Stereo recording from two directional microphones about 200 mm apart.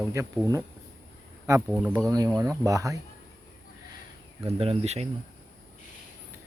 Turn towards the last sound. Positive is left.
turn(degrees=-30)  # may be behind; listen again after turning